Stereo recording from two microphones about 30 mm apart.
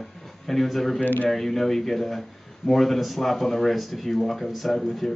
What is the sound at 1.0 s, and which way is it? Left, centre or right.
Speech, left.